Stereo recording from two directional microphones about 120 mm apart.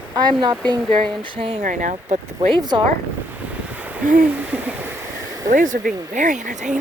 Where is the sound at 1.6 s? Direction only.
90° right.